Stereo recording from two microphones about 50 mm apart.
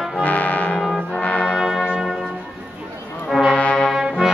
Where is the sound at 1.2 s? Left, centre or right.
Left.